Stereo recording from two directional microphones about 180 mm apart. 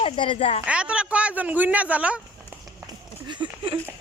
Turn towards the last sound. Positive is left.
turn(degrees=-30)  # may be behind; listen again after turning